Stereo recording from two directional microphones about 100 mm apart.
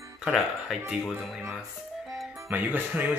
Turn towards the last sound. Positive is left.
turn(degrees=-20)  # may be behind; listen again after turning